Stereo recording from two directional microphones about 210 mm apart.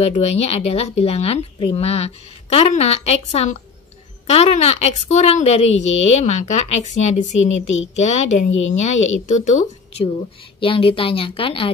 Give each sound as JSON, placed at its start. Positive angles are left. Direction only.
{"t": 0.0, "sound": "a woman's voice", "side_deg": 30}
{"t": 7.3, "sound": "speech", "side_deg": 65}
{"t": 7.9, "sound": "a woman's voice", "side_deg": 35}
{"t": 8.5, "sound": "speech", "side_deg": 70}
{"t": 9.3, "sound": "a woman's voice", "side_deg": 35}